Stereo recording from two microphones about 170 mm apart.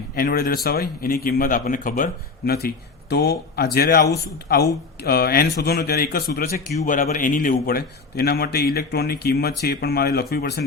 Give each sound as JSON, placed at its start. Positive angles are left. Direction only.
{"t": 0.2, "sound": "a man's voice", "side_deg": 60}
{"t": 2.5, "sound": "a man's voice", "side_deg": 65}